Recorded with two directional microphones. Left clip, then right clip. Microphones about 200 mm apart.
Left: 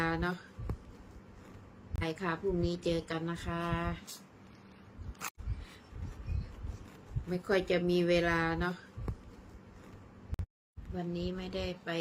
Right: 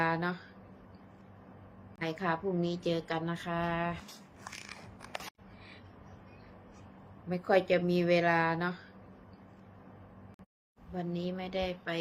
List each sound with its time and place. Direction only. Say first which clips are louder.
0.0 s speech: right 2 dB; 10° left (ahead or behind)
2.0 s a woman's voice: right 2 dB; 10° left (ahead or behind)
7.3 s a woman's voice: right 4 dB; 10° left (ahead or behind)
10.9 s a woman's voice: right 1 dB; 15° left (ahead or behind)